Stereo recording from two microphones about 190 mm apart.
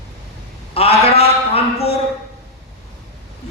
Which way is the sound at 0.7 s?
30° left (ahead or behind).